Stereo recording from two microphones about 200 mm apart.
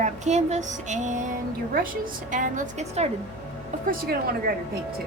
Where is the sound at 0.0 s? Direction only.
35° right (ahead or behind).